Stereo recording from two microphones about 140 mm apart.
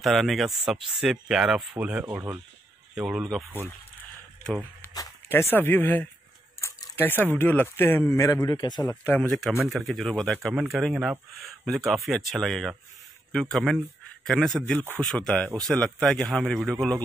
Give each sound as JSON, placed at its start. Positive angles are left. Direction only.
{"t": 0.0, "sound": "speech", "side_deg": 0}
{"t": 2.9, "sound": "speech", "side_deg": -5}
{"t": 5.3, "sound": "speech", "side_deg": 15}
{"t": 9.0, "sound": "speech", "side_deg": 10}